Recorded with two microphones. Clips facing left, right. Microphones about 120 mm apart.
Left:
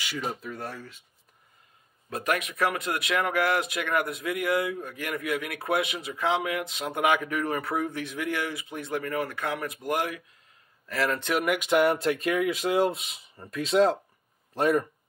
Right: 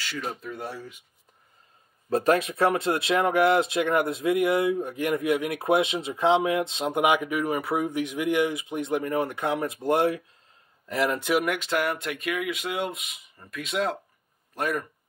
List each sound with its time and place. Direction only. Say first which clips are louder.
0.0 s speech: even; 10° left (ahead or behind); by 1.0 s 10° right (ahead or behind)
2.0 s speech: right 7 dB; 30° right (ahead or behind)
10.9 s speech: right 3 dB; 15° right (ahead or behind)
11.4 s speech: left 1 dB; 10° left (ahead or behind)
11.7 s speech: left 9 dB; 30° left (ahead or behind)